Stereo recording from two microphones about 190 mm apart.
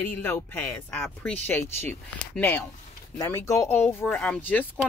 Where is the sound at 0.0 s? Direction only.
10° left (ahead or behind).